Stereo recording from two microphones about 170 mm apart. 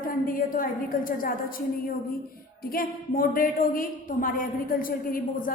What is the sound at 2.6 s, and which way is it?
A woman's voice, 60° left (ahead or behind).